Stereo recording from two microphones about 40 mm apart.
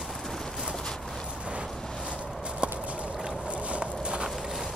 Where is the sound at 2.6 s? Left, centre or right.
Right.